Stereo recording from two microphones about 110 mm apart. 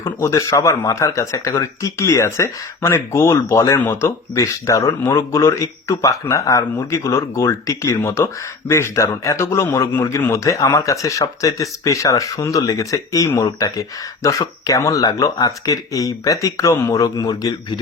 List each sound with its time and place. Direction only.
0.0 s speech: 25° left (ahead or behind)